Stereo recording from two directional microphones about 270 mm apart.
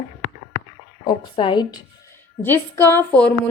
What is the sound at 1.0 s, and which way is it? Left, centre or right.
A woman's voice, centre.